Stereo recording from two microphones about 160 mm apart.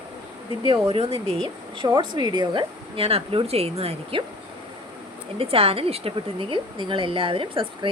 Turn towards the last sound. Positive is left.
turn(degrees=-35)  # may be behind; listen again after turning